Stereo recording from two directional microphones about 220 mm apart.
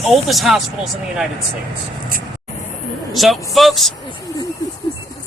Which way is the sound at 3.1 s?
Centre (ahead or behind).